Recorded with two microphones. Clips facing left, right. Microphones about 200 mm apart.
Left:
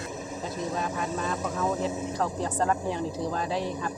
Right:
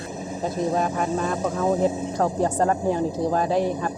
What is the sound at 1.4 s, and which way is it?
Speech, 30° right (ahead or behind).